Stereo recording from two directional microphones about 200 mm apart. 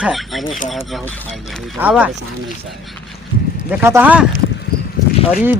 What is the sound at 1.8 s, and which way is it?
Speech, 5° right (ahead or behind).